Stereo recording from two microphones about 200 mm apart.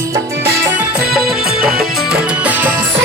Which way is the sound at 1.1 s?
Centre (ahead or behind).